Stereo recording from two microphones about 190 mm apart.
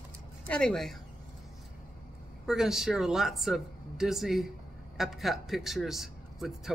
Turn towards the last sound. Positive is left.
turn(degrees=0)  # may be behind; listen again after turning